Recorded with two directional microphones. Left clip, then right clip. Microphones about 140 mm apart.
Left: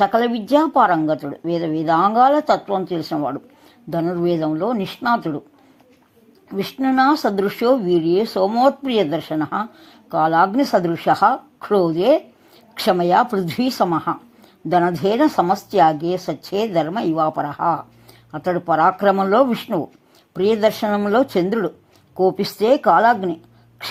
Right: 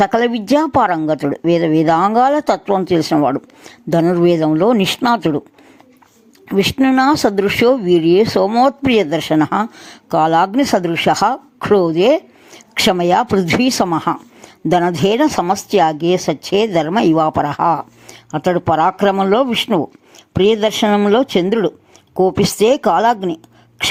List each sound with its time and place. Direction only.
0.0 s speech: 35° right (ahead or behind)
6.5 s speech: 40° right (ahead or behind)
20.8 s speech: 25° right (ahead or behind)